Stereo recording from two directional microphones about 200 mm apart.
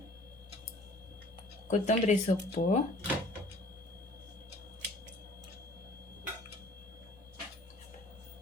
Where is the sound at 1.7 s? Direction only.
35° left (ahead or behind).